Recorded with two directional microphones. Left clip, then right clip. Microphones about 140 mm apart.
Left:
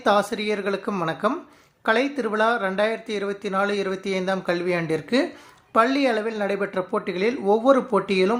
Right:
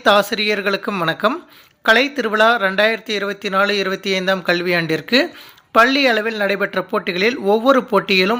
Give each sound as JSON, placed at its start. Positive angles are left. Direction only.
{"t": 0.0, "sound": "speech", "side_deg": -15}